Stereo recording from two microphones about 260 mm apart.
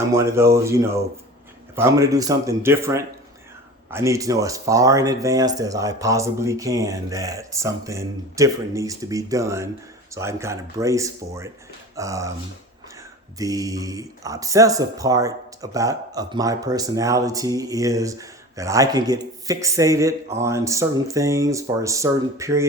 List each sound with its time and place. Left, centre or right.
0.1 s speech: centre
13.4 s speech: centre